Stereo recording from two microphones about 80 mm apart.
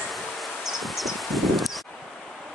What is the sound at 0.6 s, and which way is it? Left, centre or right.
Rustling leaves, centre.